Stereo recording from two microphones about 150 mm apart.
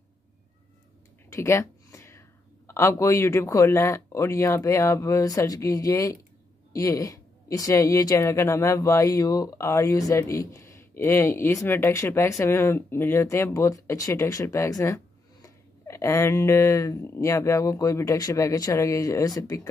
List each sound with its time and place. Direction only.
1.3 s speech: 20° left (ahead or behind)